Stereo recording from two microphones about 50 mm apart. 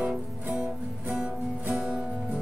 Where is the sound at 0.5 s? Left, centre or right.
Right.